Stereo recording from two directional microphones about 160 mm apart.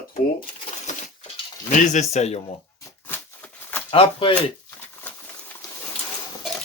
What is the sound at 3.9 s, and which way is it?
Speech, 35° left (ahead or behind).